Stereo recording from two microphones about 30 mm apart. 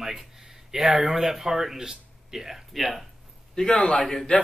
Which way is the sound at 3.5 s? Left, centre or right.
Left.